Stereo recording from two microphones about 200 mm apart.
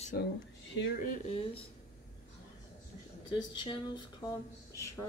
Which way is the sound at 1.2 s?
30° left (ahead or behind).